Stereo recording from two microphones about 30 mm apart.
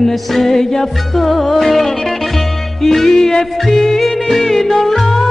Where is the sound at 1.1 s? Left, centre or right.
Centre.